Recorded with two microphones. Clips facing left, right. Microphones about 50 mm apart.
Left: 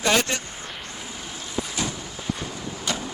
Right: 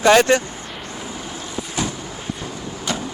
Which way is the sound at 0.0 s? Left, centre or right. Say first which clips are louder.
Right 9 dB; right.